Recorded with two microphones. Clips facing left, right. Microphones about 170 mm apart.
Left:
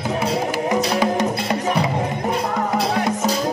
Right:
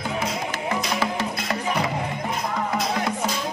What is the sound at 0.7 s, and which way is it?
Music, 35° left (ahead or behind).